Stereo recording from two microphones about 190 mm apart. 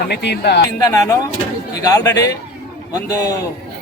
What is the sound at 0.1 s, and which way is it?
Speech, 60° left (ahead or behind).